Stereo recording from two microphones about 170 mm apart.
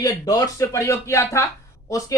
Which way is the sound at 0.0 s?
20° left (ahead or behind).